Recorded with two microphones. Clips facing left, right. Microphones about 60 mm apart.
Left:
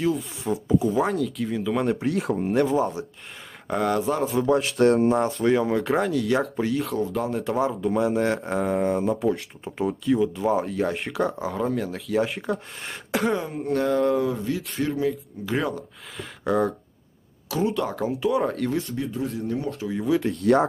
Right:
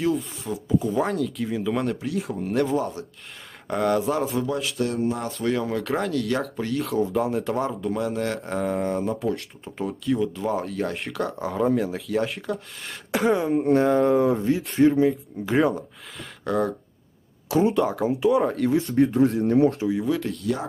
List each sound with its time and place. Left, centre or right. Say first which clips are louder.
0.0 s speech: even; centre
2.0 s speech: left 3 dB; left
2.5 s speech: left 1 dB; centre
4.5 s speech: left 7 dB; left
5.0 s speech: left 6 dB; left
5.4 s speech: left 4 dB; centre
13.7 s speech: right 1 dB; right
14.3 s speech: right 6 dB; right
16.4 s speech: left 1 dB; centre
18.9 s speech: right 9 dB; right
19.9 s speech: left 1 dB; centre
20.4 s speech: left 8 dB; left